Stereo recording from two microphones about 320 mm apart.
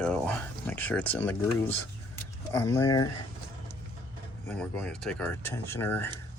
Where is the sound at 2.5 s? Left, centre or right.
Centre.